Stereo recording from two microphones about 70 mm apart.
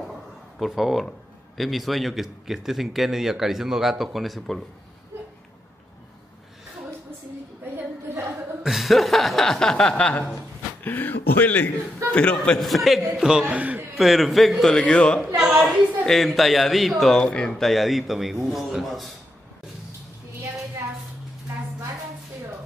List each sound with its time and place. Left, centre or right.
0.6 s a man's voice: centre
7.7 s a sound: right
8.6 s a man's voice: centre
10.8 s speech: left
12.5 s a man's voice: centre
13.5 s a man's voice: right
13.9 s a man's voice: centre
14.7 s a man's voice: centre
15.3 s a sound: centre
16.1 s a man's voice: centre
17.2 s a man's voice: centre